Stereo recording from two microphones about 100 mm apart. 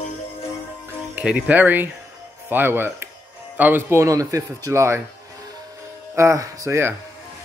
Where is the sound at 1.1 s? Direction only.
15° right (ahead or behind).